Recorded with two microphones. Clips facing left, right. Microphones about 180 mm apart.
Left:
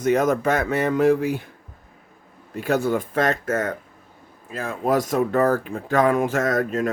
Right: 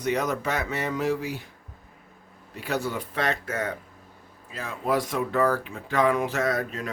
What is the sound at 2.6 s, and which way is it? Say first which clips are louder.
Speech: left 8 dB; 50° left (ahead or behind).